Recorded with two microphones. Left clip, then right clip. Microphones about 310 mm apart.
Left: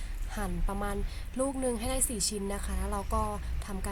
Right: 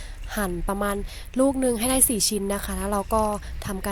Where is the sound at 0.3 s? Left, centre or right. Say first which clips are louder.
Right 10 dB; right.